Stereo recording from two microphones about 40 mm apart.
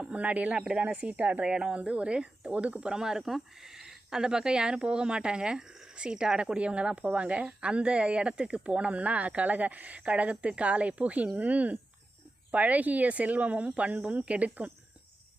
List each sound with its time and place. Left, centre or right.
0.0 s speech: right
2.5 s speech: right
2.8 s speech: centre; by 14.7 s right